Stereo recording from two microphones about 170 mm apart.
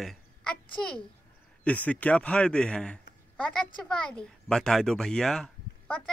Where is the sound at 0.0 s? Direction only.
Centre (ahead or behind).